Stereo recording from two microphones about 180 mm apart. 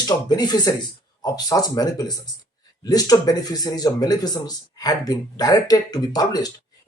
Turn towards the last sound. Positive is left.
turn(degrees=20)  # may be behind; listen again after turning